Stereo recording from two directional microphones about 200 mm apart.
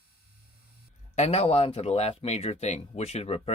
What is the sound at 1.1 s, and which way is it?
Speech, 35° left (ahead or behind).